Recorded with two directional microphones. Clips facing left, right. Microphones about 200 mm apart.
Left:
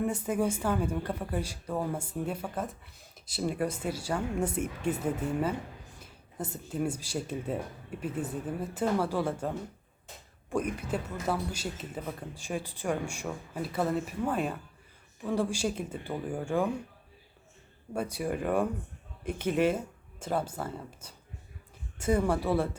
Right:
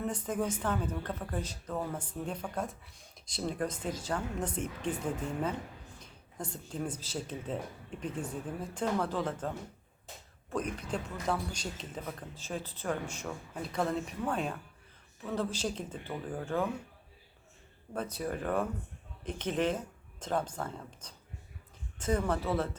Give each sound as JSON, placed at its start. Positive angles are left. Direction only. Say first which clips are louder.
{"t": 0.0, "sound": "speech", "louder": "left 4 dB", "side_deg": 10}
{"t": 10.5, "sound": "speech", "louder": "left 4 dB", "side_deg": 10}
{"t": 17.9, "sound": "speech", "louder": "left 4 dB", "side_deg": 10}